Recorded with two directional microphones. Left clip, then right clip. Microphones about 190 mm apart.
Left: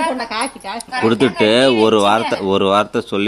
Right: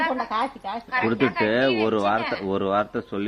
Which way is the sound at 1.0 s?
30° left (ahead or behind).